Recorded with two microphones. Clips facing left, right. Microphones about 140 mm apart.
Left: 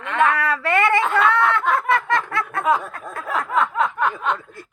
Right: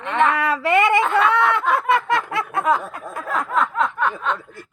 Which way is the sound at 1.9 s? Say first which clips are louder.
Right 1 dB; 20° right (ahead or behind).